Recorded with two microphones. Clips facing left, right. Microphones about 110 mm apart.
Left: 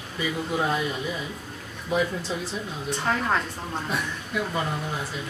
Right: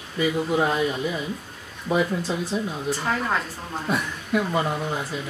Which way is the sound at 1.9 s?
60° right (ahead or behind).